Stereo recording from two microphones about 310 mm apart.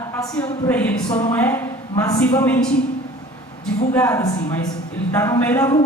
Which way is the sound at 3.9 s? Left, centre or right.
Centre.